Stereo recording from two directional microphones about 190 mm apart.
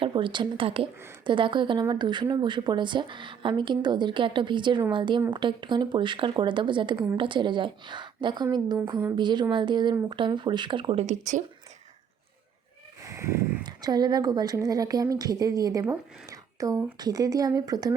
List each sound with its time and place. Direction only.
0.0 s speech: 25° right (ahead or behind)
6.9 s a woman's voice: 10° right (ahead or behind)
7.2 s speech: 25° right (ahead or behind)
8.8 s speech: 15° right (ahead or behind); by 11.4 s 40° right (ahead or behind)
13.0 s speech: 15° right (ahead or behind)